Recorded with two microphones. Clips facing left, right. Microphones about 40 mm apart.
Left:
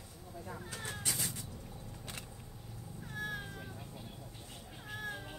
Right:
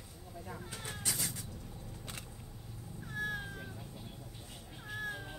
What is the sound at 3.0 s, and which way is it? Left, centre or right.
Cat, centre.